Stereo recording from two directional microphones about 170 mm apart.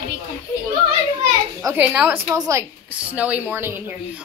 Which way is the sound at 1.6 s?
10° right (ahead or behind).